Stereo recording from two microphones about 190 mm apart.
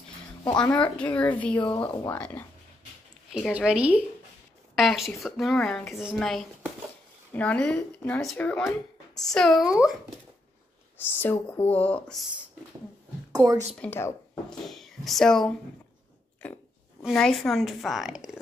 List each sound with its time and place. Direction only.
0.6 s speech: 5° left (ahead or behind)
1.6 s speech: 25° left (ahead or behind)
2.1 s speech: 5° left (ahead or behind)
11.0 s speech: 10° left (ahead or behind)
13.3 s a woman's voice: 20° right (ahead or behind)
13.7 s speech: 10° left (ahead or behind)
14.6 s speech: centre (ahead or behind)
17.0 s speech: centre (ahead or behind)